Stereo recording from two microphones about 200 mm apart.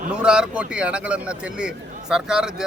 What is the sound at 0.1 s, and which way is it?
A man's voice, 5° right (ahead or behind).